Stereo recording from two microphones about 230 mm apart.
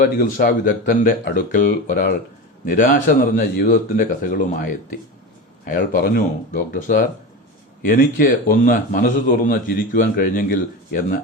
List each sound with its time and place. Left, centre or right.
0.0 s a man's voice: left